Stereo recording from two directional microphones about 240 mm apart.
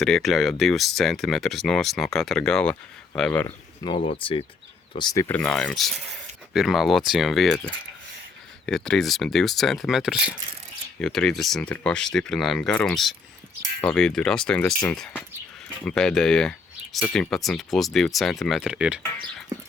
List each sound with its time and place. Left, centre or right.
0.0 s speech: centre
4.0 s speech: left
5.3 s speech: centre